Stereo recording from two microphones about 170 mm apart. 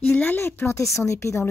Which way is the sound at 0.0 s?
10° left (ahead or behind).